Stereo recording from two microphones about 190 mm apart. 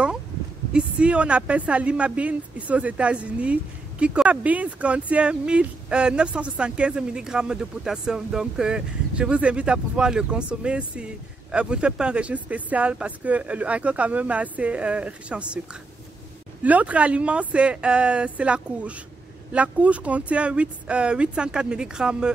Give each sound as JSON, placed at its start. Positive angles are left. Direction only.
{"t": 0.7, "sound": "speech", "side_deg": -5}